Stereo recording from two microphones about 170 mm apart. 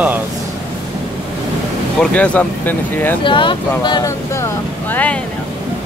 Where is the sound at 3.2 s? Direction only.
30° left (ahead or behind).